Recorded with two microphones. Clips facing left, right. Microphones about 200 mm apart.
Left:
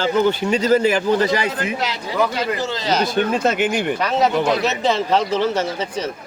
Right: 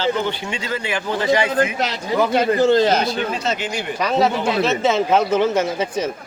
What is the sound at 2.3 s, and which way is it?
Speech, 55° right (ahead or behind).